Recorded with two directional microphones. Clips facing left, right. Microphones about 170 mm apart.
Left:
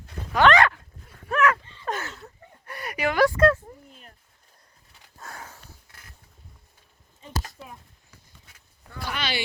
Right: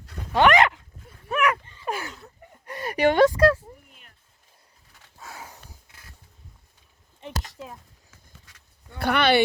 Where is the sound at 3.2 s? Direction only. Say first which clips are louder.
Right 1 dB; 15° right (ahead or behind).